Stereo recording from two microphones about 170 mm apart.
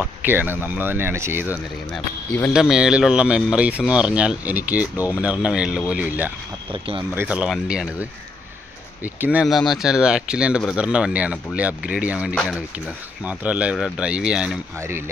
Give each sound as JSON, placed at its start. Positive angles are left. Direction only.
{"t": 0.0, "sound": "speech", "side_deg": -10}
{"t": 1.9, "sound": "speech", "side_deg": 10}
{"t": 2.5, "sound": "speech", "side_deg": -5}
{"t": 6.7, "sound": "speech", "side_deg": -30}
{"t": 7.2, "sound": "speech", "side_deg": -5}